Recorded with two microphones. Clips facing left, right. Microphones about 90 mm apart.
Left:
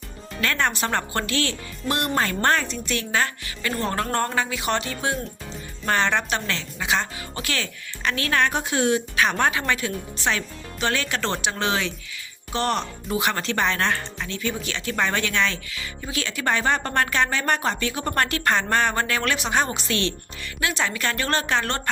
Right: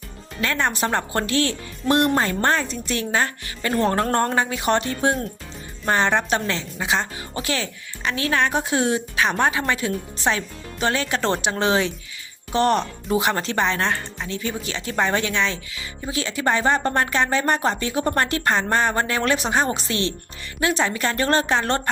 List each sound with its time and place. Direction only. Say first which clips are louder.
0.4 s speech: right 1 dB; 10° right (ahead or behind)
0.9 s speech: right 2 dB; 25° right (ahead or behind)
2.1 s a woman's voice: right 1 dB; 20° right (ahead or behind)
2.8 s speech: right 2 dB; 35° right (ahead or behind)
5.9 s a woman's voice: right 3 dB; 25° right (ahead or behind)
13.8 s speech: even; 10° right (ahead or behind)
14.3 s a woman's voice: right 1 dB; 30° right (ahead or behind)